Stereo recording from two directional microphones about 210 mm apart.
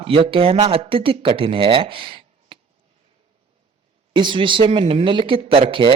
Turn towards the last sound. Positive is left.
turn(degrees=-25)  # may be behind; listen again after turning